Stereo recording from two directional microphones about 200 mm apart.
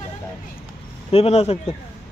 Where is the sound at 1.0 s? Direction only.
30° left (ahead or behind).